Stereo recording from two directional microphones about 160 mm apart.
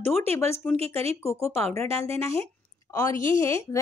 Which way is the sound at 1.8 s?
15° left (ahead or behind).